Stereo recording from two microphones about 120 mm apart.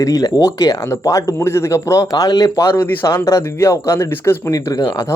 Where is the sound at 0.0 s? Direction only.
30° left (ahead or behind).